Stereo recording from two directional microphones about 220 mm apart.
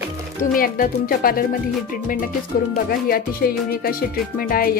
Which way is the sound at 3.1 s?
40° left (ahead or behind).